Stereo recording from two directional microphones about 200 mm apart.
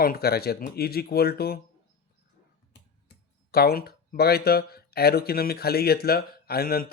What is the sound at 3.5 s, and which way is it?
Speech, 50° left (ahead or behind).